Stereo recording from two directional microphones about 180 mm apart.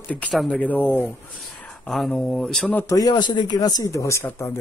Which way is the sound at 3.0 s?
25° left (ahead or behind).